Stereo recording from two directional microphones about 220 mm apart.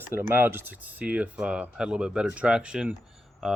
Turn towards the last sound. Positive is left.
turn(degrees=0)  # may be behind; listen again after turning